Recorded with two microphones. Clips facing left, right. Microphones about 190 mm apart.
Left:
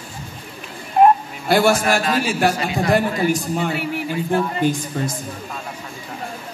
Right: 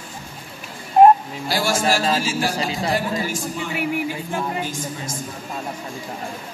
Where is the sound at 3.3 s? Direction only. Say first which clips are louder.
Left 6 dB; 60° left (ahead or behind).